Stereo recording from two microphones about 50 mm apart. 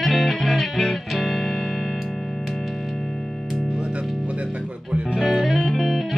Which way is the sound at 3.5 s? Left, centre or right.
Centre.